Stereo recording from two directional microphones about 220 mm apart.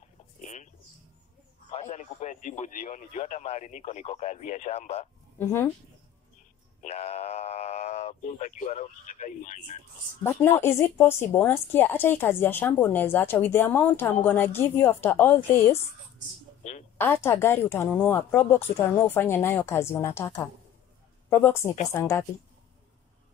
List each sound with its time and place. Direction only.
0.4 s bird: 35° left (ahead or behind)
1.7 s speech: 30° left (ahead or behind)
5.4 s speech: 10° left (ahead or behind)
6.8 s speech: 30° left (ahead or behind)
10.2 s speech: 10° left (ahead or behind)
17.0 s speech: 10° left (ahead or behind)